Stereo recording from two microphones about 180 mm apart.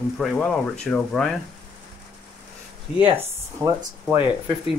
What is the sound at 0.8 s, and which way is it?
Speech, 5° left (ahead or behind).